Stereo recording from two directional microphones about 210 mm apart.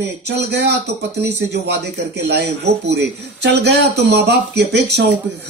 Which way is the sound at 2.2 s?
55° right (ahead or behind).